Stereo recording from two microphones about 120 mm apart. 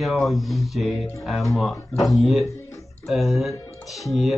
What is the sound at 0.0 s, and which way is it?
Speech, centre (ahead or behind).